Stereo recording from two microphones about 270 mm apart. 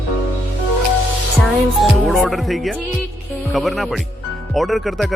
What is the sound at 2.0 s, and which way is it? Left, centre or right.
Speech, centre.